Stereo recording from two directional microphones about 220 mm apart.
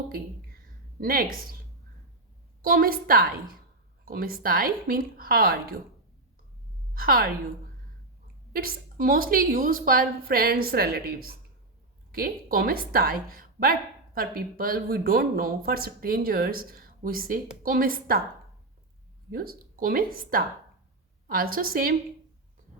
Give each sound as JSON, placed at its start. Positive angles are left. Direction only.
{"t": 0.1, "sound": "a sound", "side_deg": -40}
{"t": 2.6, "sound": "a woman's voice", "side_deg": -40}
{"t": 6.9, "sound": "a woman's voice", "side_deg": -40}
{"t": 8.5, "sound": "a woman's voice", "side_deg": -40}
{"t": 19.3, "sound": "a woman's voice", "side_deg": -40}
{"t": 22.7, "sound": "a sound", "side_deg": -30}